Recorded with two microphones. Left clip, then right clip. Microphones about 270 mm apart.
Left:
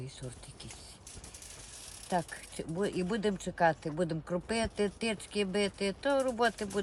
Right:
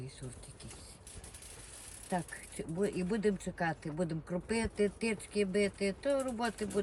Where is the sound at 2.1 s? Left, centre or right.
Centre.